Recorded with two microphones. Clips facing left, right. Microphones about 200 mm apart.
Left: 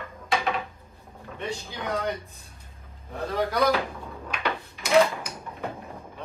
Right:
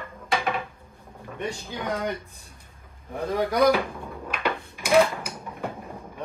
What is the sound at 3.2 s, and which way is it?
Dishes, 15° right (ahead or behind).